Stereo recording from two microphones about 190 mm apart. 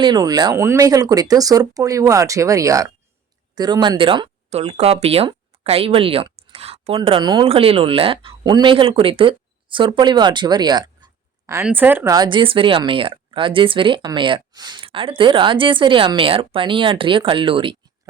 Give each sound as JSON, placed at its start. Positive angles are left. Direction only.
{"t": 0.0, "sound": "speech", "side_deg": -20}